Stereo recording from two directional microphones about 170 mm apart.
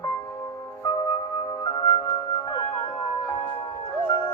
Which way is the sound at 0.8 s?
25° left (ahead or behind).